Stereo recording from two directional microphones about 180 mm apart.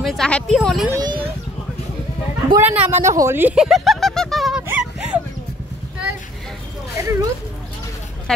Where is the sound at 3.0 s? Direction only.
15° right (ahead or behind).